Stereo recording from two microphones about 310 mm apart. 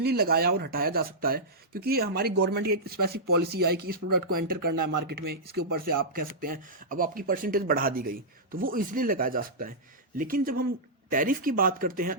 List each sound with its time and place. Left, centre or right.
0.0 s speech: right
4.1 s speech: right
6.0 s speech: right